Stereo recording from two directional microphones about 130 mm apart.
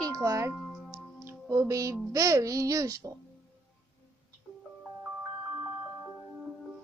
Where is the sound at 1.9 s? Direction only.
25° right (ahead or behind).